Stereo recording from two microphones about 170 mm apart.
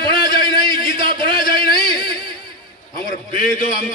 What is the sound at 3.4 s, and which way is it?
Speech, 55° left (ahead or behind).